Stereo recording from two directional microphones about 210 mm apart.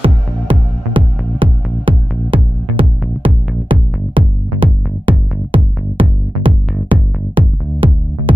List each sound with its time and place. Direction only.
0.0 s music: 25° right (ahead or behind)